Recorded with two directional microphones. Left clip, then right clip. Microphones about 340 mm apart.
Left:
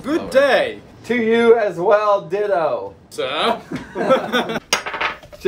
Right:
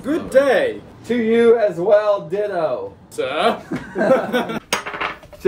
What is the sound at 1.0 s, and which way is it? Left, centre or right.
A man's voice, centre.